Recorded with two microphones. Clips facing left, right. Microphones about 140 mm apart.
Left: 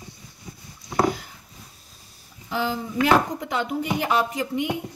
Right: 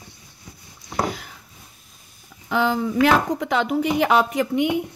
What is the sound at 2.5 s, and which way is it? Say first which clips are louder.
Speech: right 5 dB; 65° right (ahead or behind).